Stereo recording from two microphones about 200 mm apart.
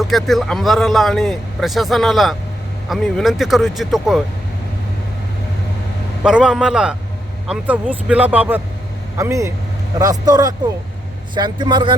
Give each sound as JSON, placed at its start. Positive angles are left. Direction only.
{"t": 0.0, "sound": "speech", "side_deg": 0}
{"t": 6.2, "sound": "speech", "side_deg": -5}